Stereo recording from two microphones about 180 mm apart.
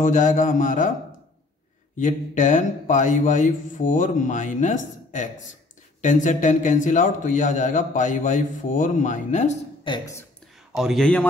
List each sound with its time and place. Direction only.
0.0 s a man's voice: 45° left (ahead or behind)
2.0 s a man's voice: 45° left (ahead or behind)
9.8 s a woman's voice: 20° left (ahead or behind)
10.7 s a man's voice: centre (ahead or behind)